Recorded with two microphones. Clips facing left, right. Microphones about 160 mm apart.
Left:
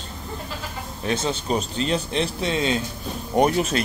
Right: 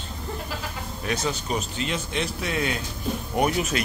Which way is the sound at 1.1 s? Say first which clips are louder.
Left 3 dB; 25° left (ahead or behind).